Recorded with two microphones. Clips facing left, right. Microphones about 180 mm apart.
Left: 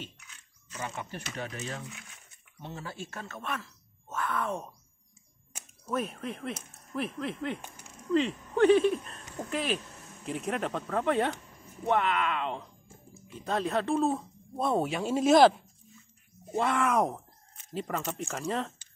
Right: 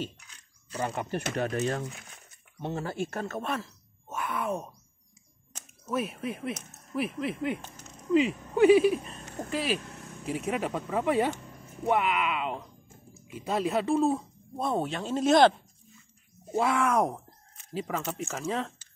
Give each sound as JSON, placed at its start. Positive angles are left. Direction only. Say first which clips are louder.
{"t": 0.0, "sound": "a sound", "louder": "right 8 dB", "side_deg": -35}
{"t": 1.1, "sound": "speech", "louder": "right 9 dB", "side_deg": -55}
{"t": 2.6, "sound": "speech", "louder": "right 8 dB", "side_deg": -50}
{"t": 3.4, "sound": "speech", "louder": "right 4 dB", "side_deg": -35}
{"t": 4.1, "sound": "speech", "louder": "right 1 dB", "side_deg": -15}
{"t": 5.5, "sound": "a sound", "louder": "even", "side_deg": 10}
{"t": 5.9, "sound": "speech", "louder": "right 2 dB", "side_deg": -5}
{"t": 7.6, "sound": "speech", "louder": "right 1 dB", "side_deg": 10}
{"t": 8.1, "sound": "speech", "louder": "right 3 dB", "side_deg": -10}
{"t": 16.5, "sound": "speech", "louder": "right 1 dB", "side_deg": 0}